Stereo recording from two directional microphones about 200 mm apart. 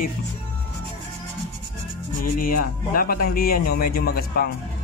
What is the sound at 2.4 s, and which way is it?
Speech, 45° left (ahead or behind).